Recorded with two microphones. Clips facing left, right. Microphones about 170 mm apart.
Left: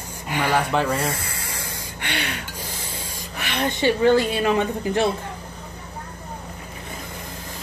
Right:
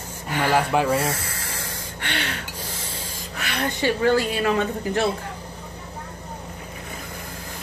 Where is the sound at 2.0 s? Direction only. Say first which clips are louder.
Left 1 dB; 15° left (ahead or behind).